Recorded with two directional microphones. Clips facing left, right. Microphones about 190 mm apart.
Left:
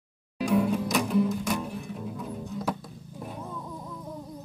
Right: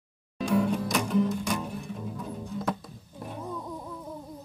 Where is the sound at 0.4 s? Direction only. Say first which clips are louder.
Left 1 dB; 5° left (ahead or behind).